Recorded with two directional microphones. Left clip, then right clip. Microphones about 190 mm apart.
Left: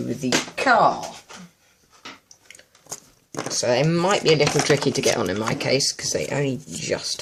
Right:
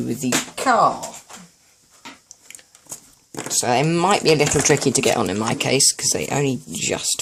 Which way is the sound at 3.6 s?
35° right (ahead or behind).